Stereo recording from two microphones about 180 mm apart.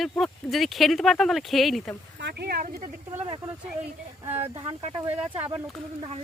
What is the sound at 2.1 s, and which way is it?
Speech, 65° right (ahead or behind).